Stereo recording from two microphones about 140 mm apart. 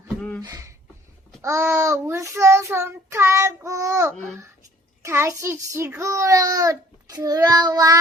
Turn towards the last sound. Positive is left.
turn(degrees=-25)  # may be behind; listen again after turning